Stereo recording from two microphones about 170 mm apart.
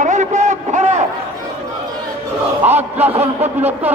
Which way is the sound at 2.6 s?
10° right (ahead or behind).